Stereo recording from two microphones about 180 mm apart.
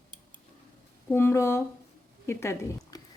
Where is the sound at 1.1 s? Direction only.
15° left (ahead or behind).